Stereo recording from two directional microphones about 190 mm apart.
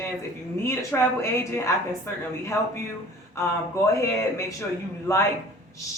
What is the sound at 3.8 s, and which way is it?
A man's voice, 15° left (ahead or behind).